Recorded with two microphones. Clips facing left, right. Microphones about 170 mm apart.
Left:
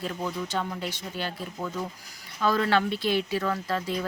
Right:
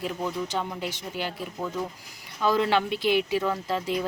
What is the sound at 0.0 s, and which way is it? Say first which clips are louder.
Speech: right 2 dB; 10° right (ahead or behind).